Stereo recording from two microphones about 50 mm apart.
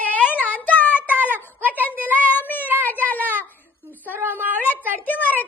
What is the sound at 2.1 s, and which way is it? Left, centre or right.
Child singing, left.